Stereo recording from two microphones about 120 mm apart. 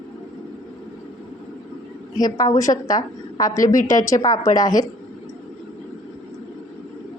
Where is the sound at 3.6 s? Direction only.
90° left.